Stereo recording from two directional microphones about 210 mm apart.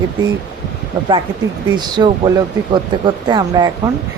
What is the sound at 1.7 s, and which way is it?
Speech, 20° right (ahead or behind).